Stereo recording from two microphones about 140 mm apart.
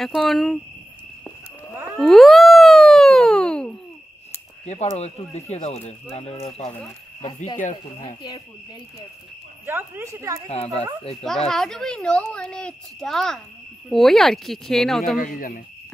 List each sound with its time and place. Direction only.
0.0 s speech: centre (ahead or behind)
2.0 s a sound: centre (ahead or behind)
4.9 s speech: 50° left (ahead or behind)
7.5 s speech: 60° left (ahead or behind)
9.7 s speech: 15° right (ahead or behind)
10.5 s speech: 50° left (ahead or behind)
11.2 s speech: centre (ahead or behind)
15.1 s speech: 80° left